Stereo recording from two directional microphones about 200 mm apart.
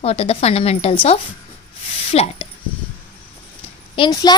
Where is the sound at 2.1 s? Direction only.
30° left (ahead or behind).